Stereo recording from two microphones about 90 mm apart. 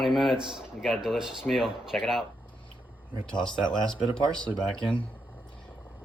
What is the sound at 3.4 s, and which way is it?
Speech, 60° left (ahead or behind).